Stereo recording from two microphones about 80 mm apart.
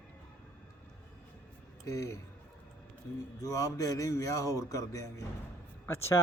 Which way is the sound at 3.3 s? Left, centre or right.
Left.